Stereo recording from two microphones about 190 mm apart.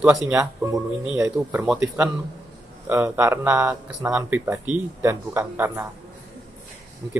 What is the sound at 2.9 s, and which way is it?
Speech, 15° right (ahead or behind).